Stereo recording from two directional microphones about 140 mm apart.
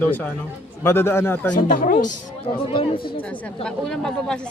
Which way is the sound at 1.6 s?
75° left (ahead or behind).